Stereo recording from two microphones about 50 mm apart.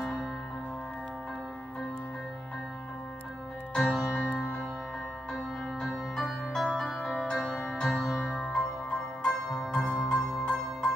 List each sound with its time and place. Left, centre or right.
0.0 s music: centre
3.7 s music: centre
4.3 s music: left
6.1 s music: centre
7.9 s music: centre
8.2 s music: centre